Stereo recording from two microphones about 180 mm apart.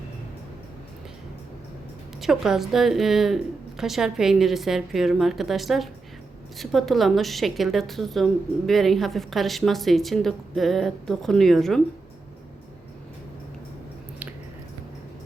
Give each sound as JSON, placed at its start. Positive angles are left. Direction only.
{"t": 2.2, "sound": "a woman's voice", "side_deg": 0}